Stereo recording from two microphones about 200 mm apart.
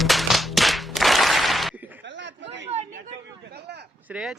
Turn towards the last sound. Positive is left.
turn(degrees=-5)  # may be behind; listen again after turning